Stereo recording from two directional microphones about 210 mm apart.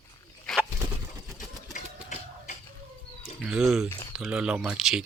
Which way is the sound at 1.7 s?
35° left (ahead or behind).